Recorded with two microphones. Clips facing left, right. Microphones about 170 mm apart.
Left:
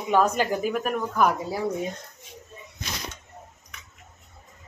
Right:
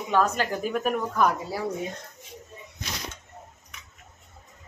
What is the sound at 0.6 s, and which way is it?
Speech, centre (ahead or behind).